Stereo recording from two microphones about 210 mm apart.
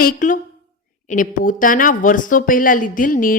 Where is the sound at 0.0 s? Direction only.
40° left (ahead or behind).